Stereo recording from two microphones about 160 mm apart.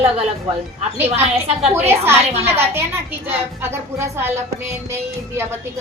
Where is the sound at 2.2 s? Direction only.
40° right (ahead or behind).